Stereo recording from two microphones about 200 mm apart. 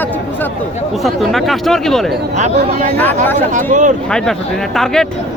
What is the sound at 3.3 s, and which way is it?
Speech, 40° right (ahead or behind).